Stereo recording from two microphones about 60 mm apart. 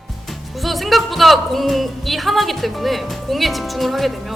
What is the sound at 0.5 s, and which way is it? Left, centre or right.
Speech, centre.